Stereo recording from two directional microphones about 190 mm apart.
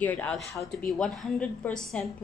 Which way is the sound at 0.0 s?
10° left (ahead or behind).